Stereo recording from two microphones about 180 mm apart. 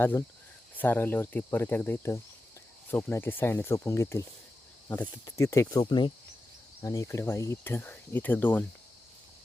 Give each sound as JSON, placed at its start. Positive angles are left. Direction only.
{"t": 0.0, "sound": "speech", "side_deg": 10}